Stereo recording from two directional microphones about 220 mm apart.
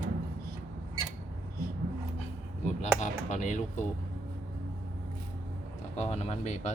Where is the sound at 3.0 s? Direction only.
30° left (ahead or behind).